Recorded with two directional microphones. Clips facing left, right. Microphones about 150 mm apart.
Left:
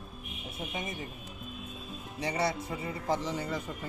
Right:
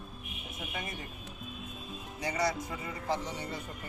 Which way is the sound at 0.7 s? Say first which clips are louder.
Left 2 dB; 20° left (ahead or behind).